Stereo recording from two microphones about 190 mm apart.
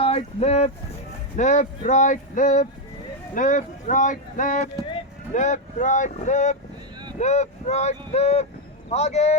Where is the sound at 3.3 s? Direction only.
40° left (ahead or behind).